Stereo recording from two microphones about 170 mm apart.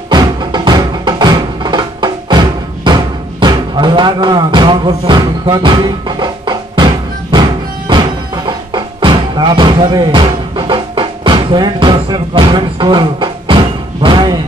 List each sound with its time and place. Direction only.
0.1 s music: 25° right (ahead or behind)